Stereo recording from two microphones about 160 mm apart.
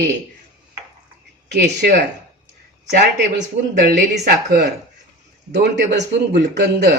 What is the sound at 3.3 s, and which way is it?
Speech, 80° right.